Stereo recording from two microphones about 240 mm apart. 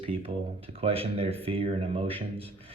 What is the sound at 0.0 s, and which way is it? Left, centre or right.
Speech, right.